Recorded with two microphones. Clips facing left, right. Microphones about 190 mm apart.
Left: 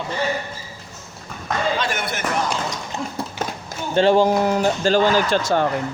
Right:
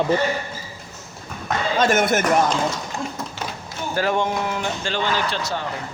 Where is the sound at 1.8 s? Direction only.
45° right (ahead or behind).